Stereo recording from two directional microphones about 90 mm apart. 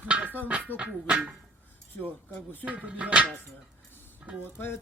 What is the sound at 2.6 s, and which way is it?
Speech, 15° right (ahead or behind).